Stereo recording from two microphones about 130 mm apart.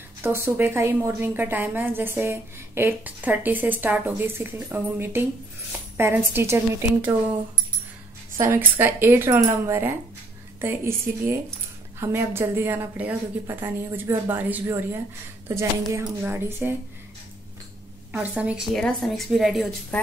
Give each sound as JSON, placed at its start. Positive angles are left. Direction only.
{"t": 0.2, "sound": "a woman's voice", "side_deg": -15}
{"t": 8.4, "sound": "a woman's voice", "side_deg": -20}
{"t": 18.1, "sound": "a woman's voice", "side_deg": -10}
{"t": 18.8, "sound": "a woman's voice", "side_deg": 5}
{"t": 19.9, "sound": "a woman's voice", "side_deg": 10}